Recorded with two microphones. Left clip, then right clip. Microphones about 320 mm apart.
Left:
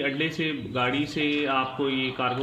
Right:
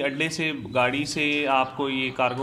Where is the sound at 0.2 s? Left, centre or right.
Right.